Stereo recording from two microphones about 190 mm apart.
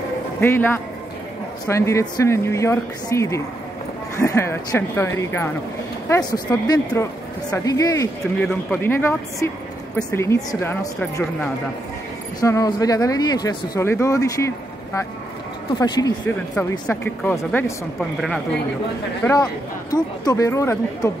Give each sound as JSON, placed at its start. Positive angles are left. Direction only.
{"t": 0.4, "sound": "speech", "side_deg": 10}
{"t": 8.2, "sound": "speech", "side_deg": 5}
{"t": 12.4, "sound": "speech", "side_deg": 20}
{"t": 15.8, "sound": "speech", "side_deg": 20}
{"t": 16.8, "sound": "speech", "side_deg": 10}
{"t": 19.2, "sound": "speech", "side_deg": 20}